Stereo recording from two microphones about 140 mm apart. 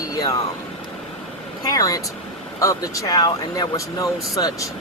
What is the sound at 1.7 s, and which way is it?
Speech, 25° left (ahead or behind).